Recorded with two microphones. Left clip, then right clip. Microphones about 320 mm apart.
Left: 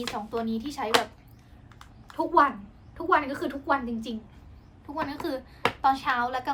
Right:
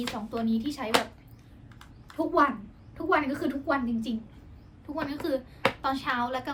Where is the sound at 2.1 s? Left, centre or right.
Centre.